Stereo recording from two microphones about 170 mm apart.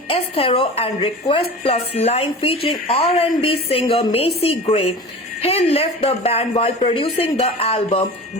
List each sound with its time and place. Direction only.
0.1 s speech: 35° left (ahead or behind)